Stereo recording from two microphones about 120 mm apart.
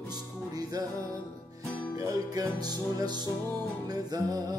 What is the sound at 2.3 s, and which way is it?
Music, 35° right (ahead or behind).